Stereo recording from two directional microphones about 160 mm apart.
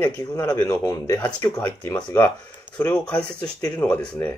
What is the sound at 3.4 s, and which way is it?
Speech, 25° left (ahead or behind).